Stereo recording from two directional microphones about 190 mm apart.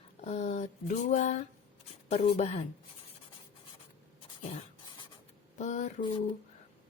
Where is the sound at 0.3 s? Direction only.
35° left (ahead or behind).